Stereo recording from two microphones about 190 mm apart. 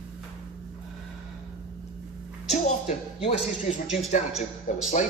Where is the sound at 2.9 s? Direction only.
35° left (ahead or behind).